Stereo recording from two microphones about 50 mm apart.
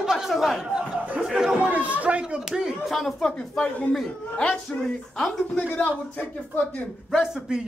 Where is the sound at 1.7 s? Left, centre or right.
Right; by 2.7 s centre.